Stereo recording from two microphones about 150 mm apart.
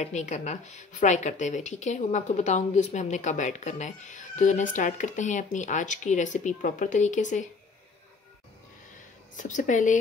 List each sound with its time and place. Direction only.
0.0 s a woman's voice: 50° left (ahead or behind)
9.4 s speech: 55° left (ahead or behind)